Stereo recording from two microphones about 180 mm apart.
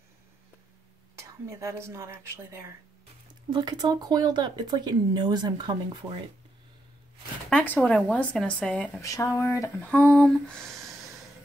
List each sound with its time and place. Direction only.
1.1 s speech: 15° right (ahead or behind)
7.4 s speech: 10° left (ahead or behind)
9.0 s speech: 15° left (ahead or behind)
9.8 s a sound: 5° left (ahead or behind)